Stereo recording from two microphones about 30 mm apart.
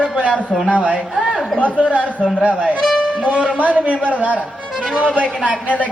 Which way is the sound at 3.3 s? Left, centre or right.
Right.